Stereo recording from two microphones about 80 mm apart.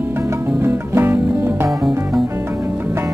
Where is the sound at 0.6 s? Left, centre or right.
Right.